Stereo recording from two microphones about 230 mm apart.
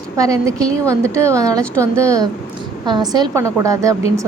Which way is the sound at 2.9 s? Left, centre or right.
Centre.